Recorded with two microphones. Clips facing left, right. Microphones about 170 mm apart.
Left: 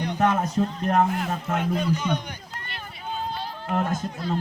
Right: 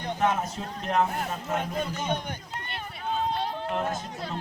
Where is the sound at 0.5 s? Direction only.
45° left (ahead or behind).